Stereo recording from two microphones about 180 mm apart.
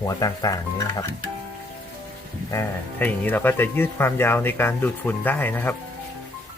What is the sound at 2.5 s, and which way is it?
Speech, 15° left (ahead or behind).